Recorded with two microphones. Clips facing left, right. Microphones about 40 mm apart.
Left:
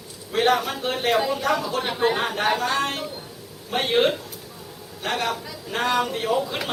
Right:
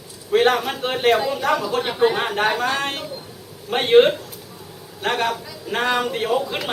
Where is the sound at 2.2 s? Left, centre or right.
Centre.